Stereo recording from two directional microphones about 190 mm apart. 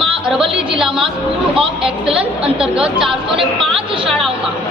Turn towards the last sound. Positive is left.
turn(degrees=0)  # may be behind; listen again after turning